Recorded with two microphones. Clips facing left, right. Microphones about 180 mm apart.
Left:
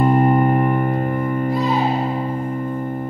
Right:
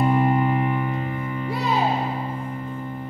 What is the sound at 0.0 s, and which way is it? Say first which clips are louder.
Music: left 5 dB; 50° left (ahead or behind).